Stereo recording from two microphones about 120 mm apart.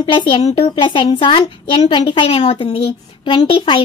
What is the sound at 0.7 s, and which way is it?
A woman's voice, 45° left (ahead or behind).